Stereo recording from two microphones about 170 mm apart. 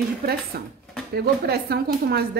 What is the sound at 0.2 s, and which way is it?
A woman's voice, 65° right (ahead or behind).